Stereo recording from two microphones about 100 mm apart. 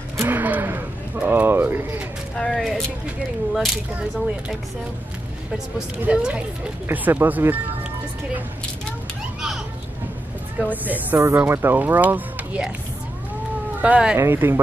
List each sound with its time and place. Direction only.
0.2 s speech: 20° right (ahead or behind)
2.3 s speech: 5° left (ahead or behind)
5.8 s a woman's voice: 10° right (ahead or behind)
10.7 s a woman's voice: 15° right (ahead or behind)
11.1 s speech: 30° right (ahead or behind)
13.7 s speech: 15° right (ahead or behind)
14.1 s speech: 25° right (ahead or behind)